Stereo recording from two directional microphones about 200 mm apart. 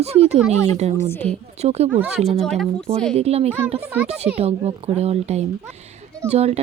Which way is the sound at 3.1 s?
30° right (ahead or behind).